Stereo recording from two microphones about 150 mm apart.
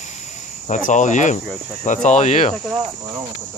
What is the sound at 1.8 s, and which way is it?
Speech, 55° left (ahead or behind).